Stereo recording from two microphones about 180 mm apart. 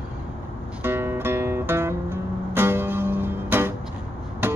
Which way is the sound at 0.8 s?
10° right (ahead or behind).